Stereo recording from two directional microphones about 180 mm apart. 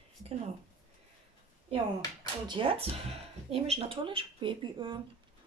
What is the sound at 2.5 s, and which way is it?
Speech, 30° right (ahead or behind).